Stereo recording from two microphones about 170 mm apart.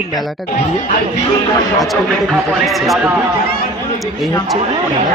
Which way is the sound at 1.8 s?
Centre (ahead or behind).